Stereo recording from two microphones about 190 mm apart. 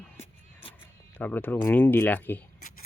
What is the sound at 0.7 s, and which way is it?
Speech, 10° left (ahead or behind).